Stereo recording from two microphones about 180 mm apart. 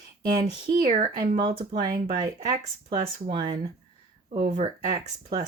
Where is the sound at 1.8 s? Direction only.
50° right (ahead or behind).